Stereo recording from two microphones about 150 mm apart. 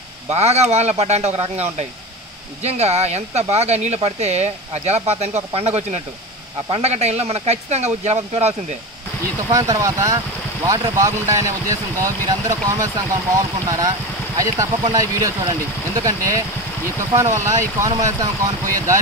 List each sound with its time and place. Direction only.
0.3 s speech: 45° right (ahead or behind)
9.5 s speech: 25° right (ahead or behind)